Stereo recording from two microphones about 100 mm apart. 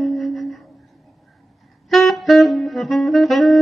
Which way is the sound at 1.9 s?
Centre (ahead or behind).